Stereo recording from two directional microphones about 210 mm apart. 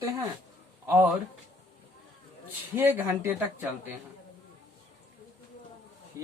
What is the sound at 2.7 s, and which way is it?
Speech, 10° right (ahead or behind).